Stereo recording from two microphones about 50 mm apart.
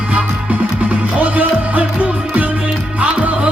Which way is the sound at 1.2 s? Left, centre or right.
Right.